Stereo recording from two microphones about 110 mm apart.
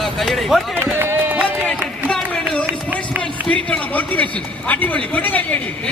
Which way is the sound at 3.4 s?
10° left (ahead or behind).